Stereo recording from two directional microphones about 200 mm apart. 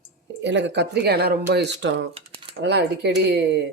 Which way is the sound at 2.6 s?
55° right (ahead or behind).